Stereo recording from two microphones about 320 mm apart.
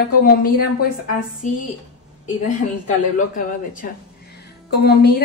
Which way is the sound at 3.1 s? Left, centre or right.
Left.